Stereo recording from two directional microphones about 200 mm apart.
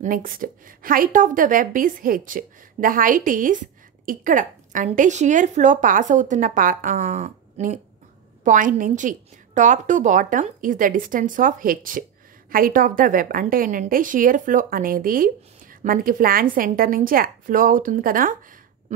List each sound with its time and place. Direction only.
0.0 s a woman's voice: 45° right (ahead or behind)